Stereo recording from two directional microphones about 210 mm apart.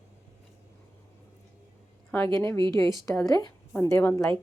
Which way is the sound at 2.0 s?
10° left (ahead or behind).